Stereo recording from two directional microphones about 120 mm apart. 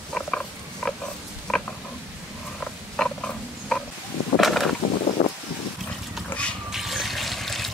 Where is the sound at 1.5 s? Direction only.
5° left (ahead or behind).